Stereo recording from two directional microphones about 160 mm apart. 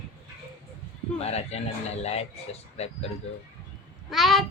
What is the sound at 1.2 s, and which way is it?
A man's voice, 40° left (ahead or behind).